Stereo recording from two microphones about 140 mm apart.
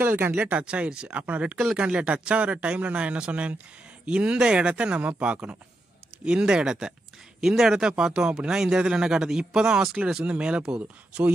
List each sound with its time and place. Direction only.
0.0 s speech: 15° right (ahead or behind)